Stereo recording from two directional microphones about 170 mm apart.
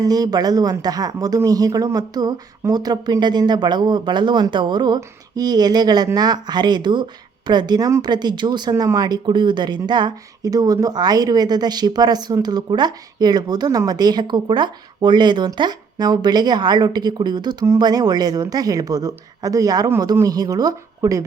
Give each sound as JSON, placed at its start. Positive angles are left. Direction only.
{"t": 0.0, "sound": "speech", "side_deg": -20}